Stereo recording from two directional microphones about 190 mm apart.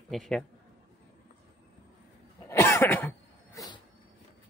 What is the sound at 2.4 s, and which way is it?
Cough, 15° left (ahead or behind).